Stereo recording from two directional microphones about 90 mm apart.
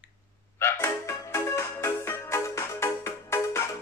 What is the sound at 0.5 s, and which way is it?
Music, 30° left (ahead or behind).